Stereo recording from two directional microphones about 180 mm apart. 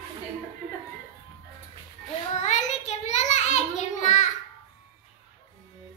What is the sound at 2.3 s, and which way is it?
Child singing, 40° left (ahead or behind).